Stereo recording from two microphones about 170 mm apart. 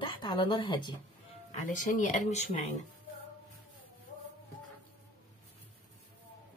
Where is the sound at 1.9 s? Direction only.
45° left (ahead or behind).